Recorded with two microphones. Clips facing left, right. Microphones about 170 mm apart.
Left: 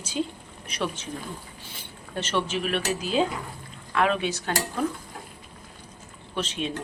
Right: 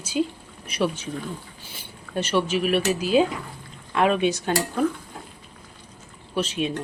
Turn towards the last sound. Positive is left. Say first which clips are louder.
# right 4 dB
turn(degrees=-10)  # may be behind; listen again after turning